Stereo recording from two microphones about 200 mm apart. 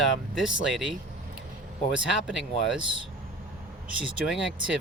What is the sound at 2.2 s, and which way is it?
Speech, 5° right (ahead or behind).